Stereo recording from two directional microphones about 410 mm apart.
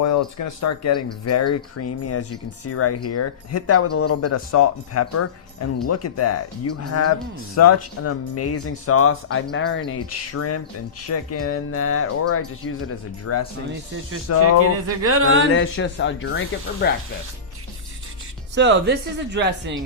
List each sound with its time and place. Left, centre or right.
0.0 s speech: left
14.6 s a sound: right
15.5 s speech: left
18.5 s speech: right